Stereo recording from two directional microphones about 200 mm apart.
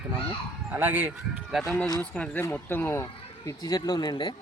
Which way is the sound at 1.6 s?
15° left (ahead or behind).